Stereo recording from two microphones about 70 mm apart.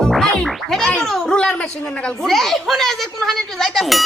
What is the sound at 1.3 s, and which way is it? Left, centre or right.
Speech, centre.